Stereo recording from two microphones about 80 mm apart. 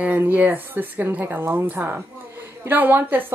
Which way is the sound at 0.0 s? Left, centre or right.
Right.